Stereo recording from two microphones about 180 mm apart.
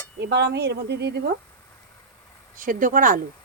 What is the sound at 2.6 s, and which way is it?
Speech, 50° right (ahead or behind).